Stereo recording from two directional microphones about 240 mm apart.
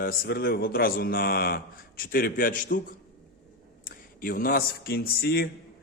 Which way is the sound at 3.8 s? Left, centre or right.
Left.